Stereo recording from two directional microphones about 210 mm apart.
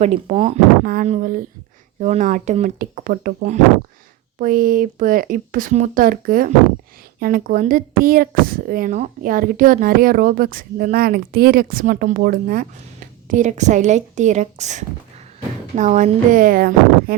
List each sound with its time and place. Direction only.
0.0 s speech: 30° right (ahead or behind)